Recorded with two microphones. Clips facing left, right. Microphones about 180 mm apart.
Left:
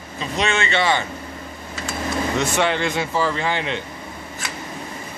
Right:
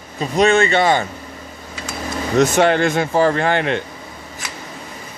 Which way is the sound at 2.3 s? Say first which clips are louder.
Right 9 dB; 45° right (ahead or behind).